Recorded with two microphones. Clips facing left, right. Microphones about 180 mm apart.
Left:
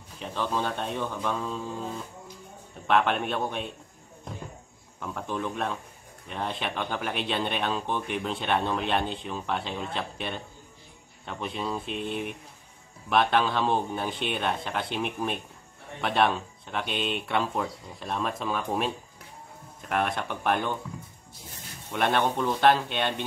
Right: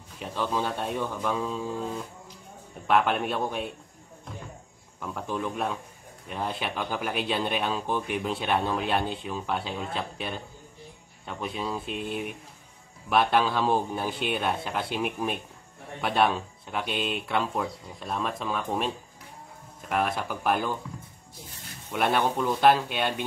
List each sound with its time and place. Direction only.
0.2 s speech: 10° right (ahead or behind)
2.9 s speech: 5° right (ahead or behind)
5.0 s speech: centre (ahead or behind)
21.9 s speech: 5° right (ahead or behind)